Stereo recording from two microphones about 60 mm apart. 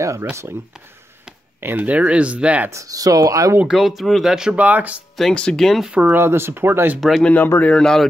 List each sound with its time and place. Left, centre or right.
0.0 s speech: right
1.6 s speech: right
1.9 s speech: right
2.7 s speech: right
3.6 s speech: centre
4.6 s speech: right
5.3 s speech: centre
5.6 s speech: centre
6.0 s speech: right
7.0 s speech: centre
7.6 s speech: centre